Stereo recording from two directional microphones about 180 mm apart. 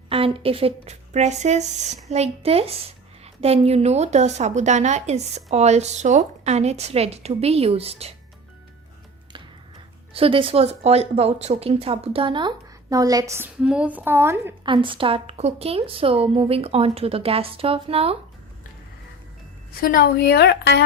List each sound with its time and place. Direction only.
0.1 s a woman's voice: 30° right (ahead or behind)
10.2 s speech: 30° right (ahead or behind); by 14.5 s 10° right (ahead or behind)
14.6 s a woman's voice: 25° right (ahead or behind)
19.8 s a woman's voice: 55° left (ahead or behind)